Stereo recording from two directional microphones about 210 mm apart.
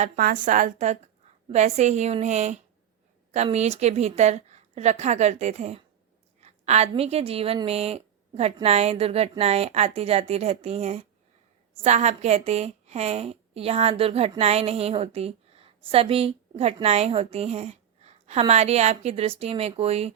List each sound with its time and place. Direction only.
0.2 s a woman's voice: 40° right (ahead or behind)